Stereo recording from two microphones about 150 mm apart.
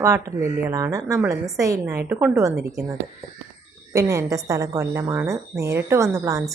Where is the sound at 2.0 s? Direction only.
10° right (ahead or behind).